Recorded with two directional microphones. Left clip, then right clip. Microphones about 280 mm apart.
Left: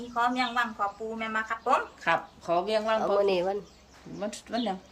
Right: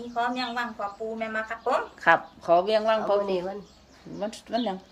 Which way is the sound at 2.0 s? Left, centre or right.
Centre.